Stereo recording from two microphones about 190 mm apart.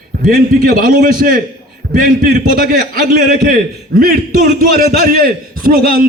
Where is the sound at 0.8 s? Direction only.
50° right (ahead or behind).